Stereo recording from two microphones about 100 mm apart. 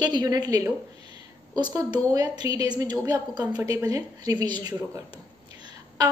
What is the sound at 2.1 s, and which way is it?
A woman's voice, 40° right (ahead or behind).